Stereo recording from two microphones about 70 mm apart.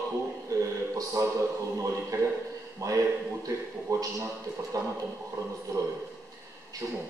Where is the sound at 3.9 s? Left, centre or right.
Right.